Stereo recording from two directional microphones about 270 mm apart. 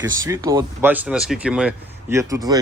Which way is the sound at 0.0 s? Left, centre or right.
Centre.